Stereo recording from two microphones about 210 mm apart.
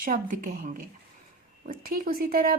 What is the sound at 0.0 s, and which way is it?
A woman's voice, 40° right (ahead or behind).